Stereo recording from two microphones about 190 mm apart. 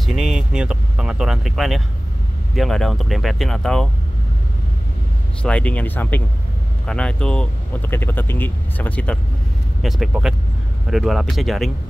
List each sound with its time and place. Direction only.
0.0 s speech: centre (ahead or behind)
5.4 s speech: 5° left (ahead or behind)